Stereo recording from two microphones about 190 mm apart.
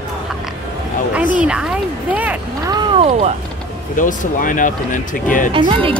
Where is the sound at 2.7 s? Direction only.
25° right (ahead or behind).